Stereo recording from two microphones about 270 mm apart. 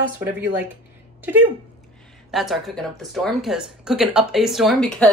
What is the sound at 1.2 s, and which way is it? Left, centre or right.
A woman's voice, centre.